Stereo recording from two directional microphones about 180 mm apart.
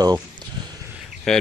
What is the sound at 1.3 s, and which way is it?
Speech, 5° left (ahead or behind).